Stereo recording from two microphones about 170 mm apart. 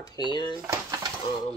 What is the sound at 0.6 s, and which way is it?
Dishes, 20° right (ahead or behind).